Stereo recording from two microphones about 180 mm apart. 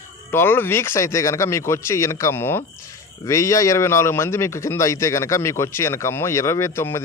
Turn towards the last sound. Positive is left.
turn(degrees=15)  # may be behind; listen again after turning